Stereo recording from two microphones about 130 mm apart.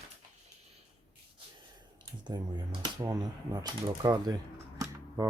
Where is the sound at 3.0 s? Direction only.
30° right (ahead or behind).